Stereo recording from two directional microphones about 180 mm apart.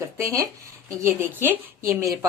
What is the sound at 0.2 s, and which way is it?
Speech, 15° right (ahead or behind).